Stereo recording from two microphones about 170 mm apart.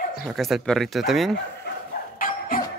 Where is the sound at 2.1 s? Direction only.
55° left (ahead or behind).